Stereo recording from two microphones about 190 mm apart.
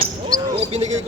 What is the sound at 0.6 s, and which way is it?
Speech, 35° right (ahead or behind).